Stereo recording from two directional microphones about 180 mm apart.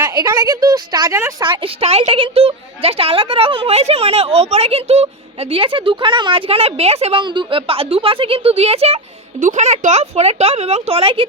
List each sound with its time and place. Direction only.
0.0 s speech: 20° right (ahead or behind)
1.5 s a woman's voice: 35° right (ahead or behind)